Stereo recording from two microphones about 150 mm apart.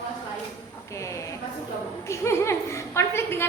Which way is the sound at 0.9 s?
20° left (ahead or behind).